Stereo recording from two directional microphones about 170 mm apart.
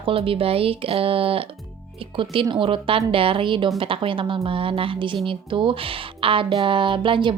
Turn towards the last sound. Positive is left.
turn(degrees=-30)  # may be behind; listen again after turning